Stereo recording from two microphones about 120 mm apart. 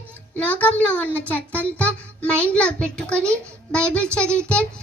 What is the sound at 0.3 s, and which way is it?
Speech, 15° left (ahead or behind).